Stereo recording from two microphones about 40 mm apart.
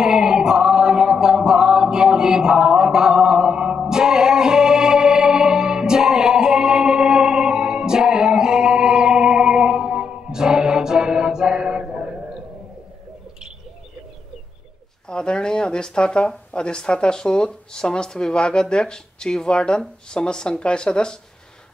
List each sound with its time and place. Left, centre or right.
0.0 s music: centre
15.0 s speech: left